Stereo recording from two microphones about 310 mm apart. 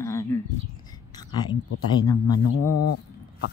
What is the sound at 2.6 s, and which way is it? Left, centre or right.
Speech, left.